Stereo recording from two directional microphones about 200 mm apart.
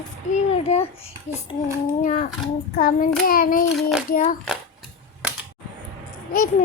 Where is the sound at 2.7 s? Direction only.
45° left (ahead or behind).